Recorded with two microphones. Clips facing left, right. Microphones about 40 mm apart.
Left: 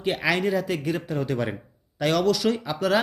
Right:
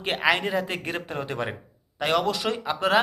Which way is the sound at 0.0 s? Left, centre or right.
Right.